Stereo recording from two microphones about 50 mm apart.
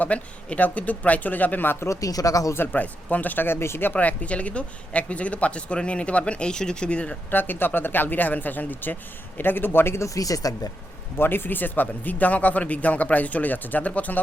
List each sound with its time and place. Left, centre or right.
0.0 s speech: left
2.2 s speech: left
2.7 s speech: left
3.9 s speech: left
7.3 s a man's voice: left
11.2 s speech: left